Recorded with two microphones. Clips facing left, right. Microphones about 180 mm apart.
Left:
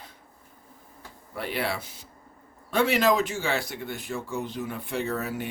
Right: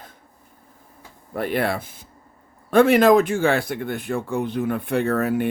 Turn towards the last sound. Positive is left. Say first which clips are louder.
# right 9 dB
turn(degrees=-55)  # may be behind; listen again after turning